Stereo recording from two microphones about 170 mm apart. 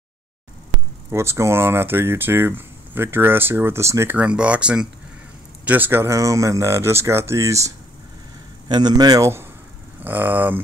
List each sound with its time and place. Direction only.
1.1 s a man's voice: 15° right (ahead or behind)